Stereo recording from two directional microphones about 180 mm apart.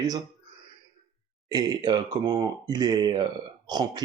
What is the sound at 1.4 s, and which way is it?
Speech, 20° right (ahead or behind).